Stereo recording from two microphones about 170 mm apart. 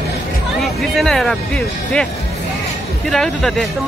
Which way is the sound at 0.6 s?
Centre (ahead or behind).